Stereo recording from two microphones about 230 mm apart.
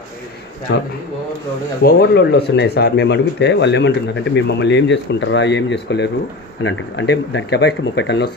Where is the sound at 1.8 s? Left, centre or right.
Left.